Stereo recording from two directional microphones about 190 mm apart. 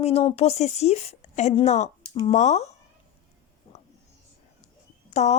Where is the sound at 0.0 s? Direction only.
30° left (ahead or behind).